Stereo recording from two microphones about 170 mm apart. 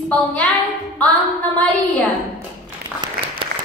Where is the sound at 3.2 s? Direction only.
65° right (ahead or behind).